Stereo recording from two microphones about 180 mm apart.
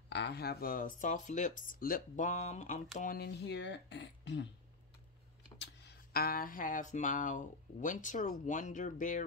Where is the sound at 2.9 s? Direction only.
50° left (ahead or behind); by 4.4 s 75° left (ahead or behind).